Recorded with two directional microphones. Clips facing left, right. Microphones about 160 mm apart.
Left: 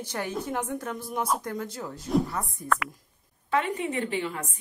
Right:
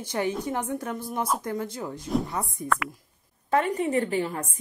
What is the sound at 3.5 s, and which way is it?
A woman's voice, 40° right (ahead or behind).